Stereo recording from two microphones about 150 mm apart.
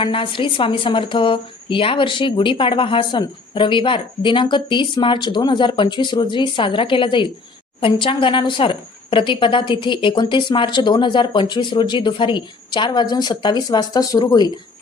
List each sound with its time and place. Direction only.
0.0 s a woman's voice: 35° left (ahead or behind)